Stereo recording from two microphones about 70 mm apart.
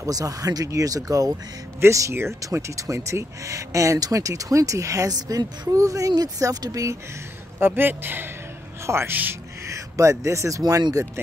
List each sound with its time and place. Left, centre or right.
0.0 s speech: right
1.8 s speech: right
7.6 s speech: right
9.1 s speech: right
9.7 s speech: right